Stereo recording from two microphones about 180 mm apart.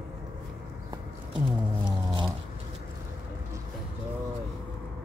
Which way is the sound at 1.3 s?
25° right (ahead or behind).